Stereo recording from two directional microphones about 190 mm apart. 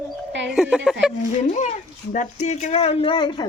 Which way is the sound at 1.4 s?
40° left (ahead or behind).